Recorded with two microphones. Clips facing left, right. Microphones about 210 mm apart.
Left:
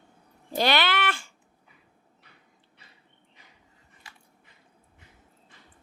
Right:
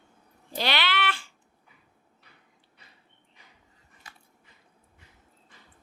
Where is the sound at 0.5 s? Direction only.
45° left (ahead or behind).